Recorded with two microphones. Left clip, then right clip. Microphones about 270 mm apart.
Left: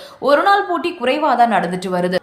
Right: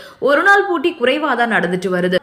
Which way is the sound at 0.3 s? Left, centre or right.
Centre.